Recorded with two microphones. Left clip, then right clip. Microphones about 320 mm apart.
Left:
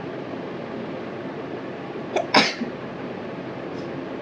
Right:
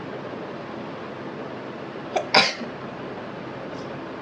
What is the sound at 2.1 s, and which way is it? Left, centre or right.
Cough, centre.